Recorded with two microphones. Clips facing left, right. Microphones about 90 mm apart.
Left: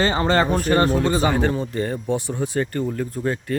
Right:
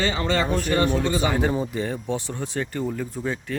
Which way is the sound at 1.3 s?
5° right (ahead or behind).